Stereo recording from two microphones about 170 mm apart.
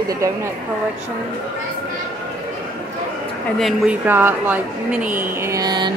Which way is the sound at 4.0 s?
10° right (ahead or behind).